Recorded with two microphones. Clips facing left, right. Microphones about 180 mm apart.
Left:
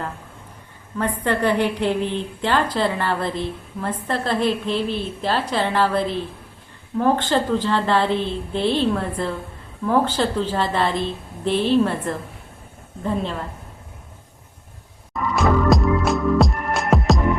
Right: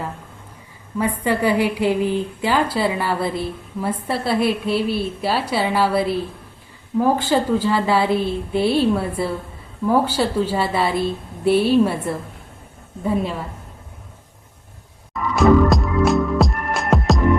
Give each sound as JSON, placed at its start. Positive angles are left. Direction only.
{"t": 1.2, "sound": "a woman's voice", "side_deg": -10}
{"t": 15.4, "sound": "music", "side_deg": 0}